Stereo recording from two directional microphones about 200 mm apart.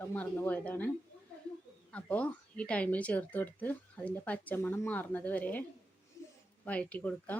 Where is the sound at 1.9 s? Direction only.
5° left (ahead or behind).